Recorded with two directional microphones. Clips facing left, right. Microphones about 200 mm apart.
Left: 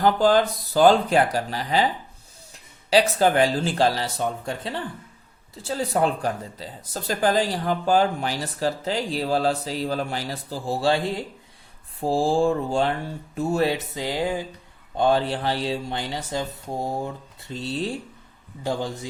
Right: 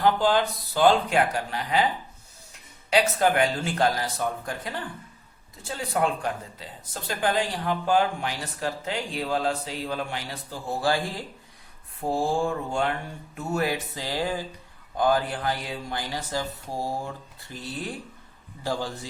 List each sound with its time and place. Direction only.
0.0 s speech: 40° left (ahead or behind); by 19.0 s 20° left (ahead or behind)